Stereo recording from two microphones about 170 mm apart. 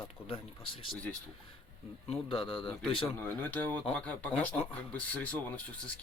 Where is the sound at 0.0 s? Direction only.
35° left (ahead or behind).